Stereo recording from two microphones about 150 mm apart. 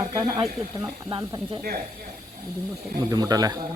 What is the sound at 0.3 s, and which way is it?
Speech, 35° right (ahead or behind).